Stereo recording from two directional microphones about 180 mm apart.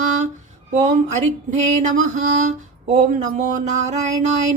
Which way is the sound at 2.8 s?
40° right (ahead or behind).